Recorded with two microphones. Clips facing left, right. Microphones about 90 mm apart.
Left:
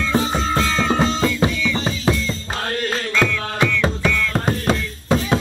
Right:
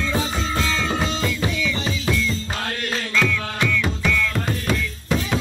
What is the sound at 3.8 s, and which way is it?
Music, 35° left (ahead or behind).